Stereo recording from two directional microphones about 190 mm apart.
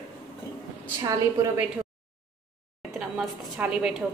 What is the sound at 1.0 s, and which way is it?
Speech, 20° right (ahead or behind).